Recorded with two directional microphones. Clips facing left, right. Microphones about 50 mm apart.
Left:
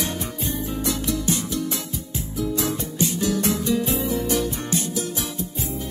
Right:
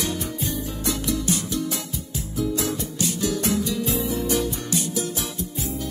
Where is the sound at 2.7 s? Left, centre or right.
Left.